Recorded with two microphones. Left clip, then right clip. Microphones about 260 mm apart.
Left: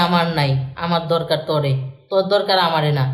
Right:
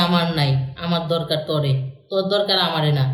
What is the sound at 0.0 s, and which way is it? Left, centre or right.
A man's voice, centre.